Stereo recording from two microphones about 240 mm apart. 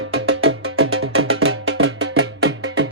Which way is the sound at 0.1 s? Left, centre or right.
Right.